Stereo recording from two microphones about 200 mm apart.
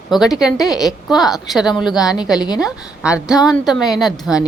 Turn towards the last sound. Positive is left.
turn(degrees=-5)  # may be behind; listen again after turning